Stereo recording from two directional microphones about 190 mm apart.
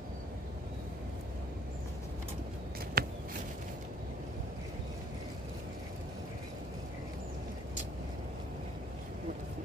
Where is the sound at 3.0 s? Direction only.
50° right (ahead or behind).